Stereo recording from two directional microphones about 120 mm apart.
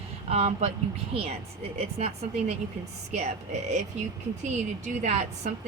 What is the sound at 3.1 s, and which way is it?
Speech, 65° right (ahead or behind).